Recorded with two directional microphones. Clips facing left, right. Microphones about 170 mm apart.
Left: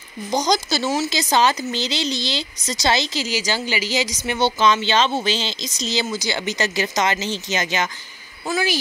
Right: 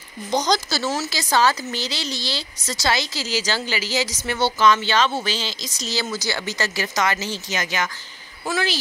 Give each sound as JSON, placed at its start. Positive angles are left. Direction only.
{"t": 0.3, "sound": "speech", "side_deg": 15}